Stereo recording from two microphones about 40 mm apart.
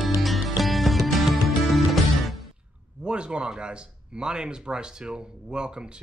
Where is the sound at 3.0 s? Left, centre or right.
Right.